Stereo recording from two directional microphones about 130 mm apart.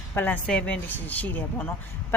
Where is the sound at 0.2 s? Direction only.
10° left (ahead or behind).